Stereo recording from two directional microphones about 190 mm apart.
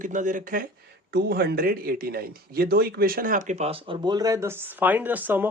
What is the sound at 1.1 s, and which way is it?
Speech, 60° right (ahead or behind).